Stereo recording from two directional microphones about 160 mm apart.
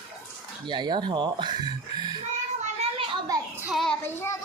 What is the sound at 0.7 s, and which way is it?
A woman's voice, 30° right (ahead or behind).